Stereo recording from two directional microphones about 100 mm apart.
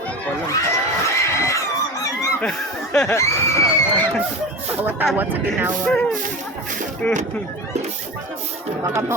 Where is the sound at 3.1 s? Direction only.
30° left (ahead or behind).